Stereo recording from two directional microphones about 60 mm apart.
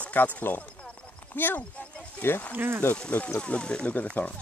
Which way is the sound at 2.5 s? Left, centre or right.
Right.